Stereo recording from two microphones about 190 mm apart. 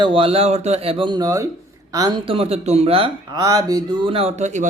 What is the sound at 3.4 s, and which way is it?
Speech, 20° right (ahead or behind).